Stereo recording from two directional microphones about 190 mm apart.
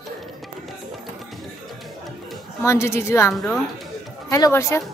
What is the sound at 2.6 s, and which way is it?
Speech, 15° left (ahead or behind).